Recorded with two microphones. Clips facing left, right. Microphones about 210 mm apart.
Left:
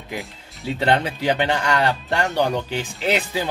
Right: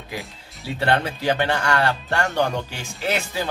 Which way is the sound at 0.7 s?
15° left (ahead or behind).